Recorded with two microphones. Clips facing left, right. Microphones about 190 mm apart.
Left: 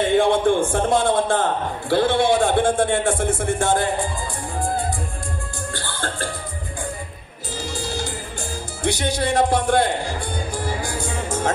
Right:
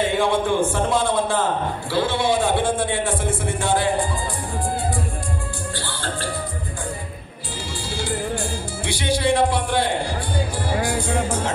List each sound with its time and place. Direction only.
0.2 s a man's voice: 50° left (ahead or behind)
1.9 s a sound: 55° left (ahead or behind)
5.8 s music: 45° left (ahead or behind)
8.8 s a man's voice: 45° left (ahead or behind)